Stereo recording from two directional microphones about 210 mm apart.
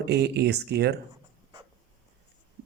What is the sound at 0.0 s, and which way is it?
Speech, 50° right (ahead or behind).